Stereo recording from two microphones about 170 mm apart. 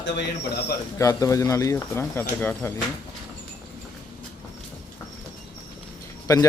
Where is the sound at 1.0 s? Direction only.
20° left (ahead or behind).